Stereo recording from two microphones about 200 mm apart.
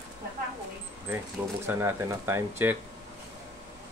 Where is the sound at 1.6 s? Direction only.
15° right (ahead or behind).